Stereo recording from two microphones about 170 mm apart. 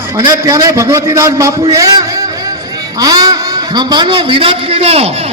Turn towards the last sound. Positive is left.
turn(degrees=-35)  # may be behind; listen again after turning